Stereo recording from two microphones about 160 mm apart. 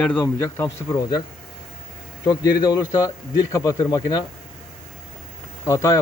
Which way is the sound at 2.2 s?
25° left (ahead or behind).